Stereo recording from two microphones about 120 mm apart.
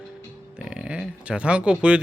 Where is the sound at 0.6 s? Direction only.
10° right (ahead or behind).